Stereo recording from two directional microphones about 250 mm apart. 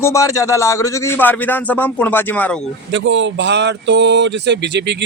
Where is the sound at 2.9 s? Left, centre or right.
Right.